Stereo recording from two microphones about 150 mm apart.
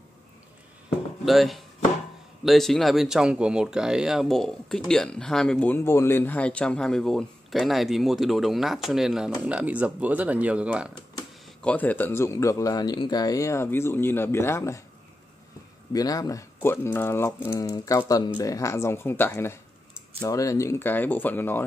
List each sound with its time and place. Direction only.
1.2 s speech: centre (ahead or behind)
11.6 s a man's voice: 10° left (ahead or behind)
15.9 s a man's voice: 25° left (ahead or behind)